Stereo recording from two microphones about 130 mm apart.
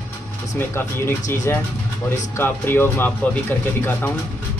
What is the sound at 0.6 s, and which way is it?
Speech, 20° left (ahead or behind).